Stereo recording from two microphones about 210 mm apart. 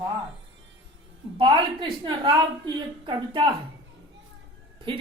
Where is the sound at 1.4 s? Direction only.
25° right (ahead or behind).